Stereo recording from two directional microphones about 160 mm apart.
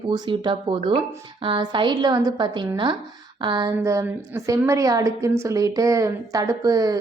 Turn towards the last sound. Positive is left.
turn(degrees=-20)  # may be behind; listen again after turning